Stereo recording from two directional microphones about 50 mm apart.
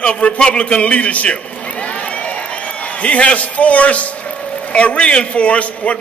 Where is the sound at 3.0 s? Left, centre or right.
Left.